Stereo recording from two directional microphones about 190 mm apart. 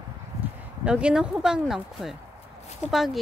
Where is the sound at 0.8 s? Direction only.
5° right (ahead or behind).